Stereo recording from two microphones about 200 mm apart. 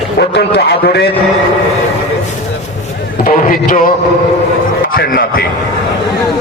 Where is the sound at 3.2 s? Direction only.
40° left (ahead or behind).